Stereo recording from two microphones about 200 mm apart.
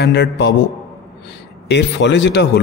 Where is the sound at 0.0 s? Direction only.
60° left (ahead or behind).